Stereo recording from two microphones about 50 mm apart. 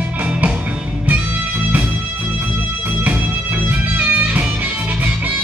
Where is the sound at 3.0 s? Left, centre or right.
Right.